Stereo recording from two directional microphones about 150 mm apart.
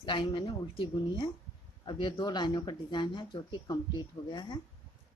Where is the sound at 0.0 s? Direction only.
30° left (ahead or behind).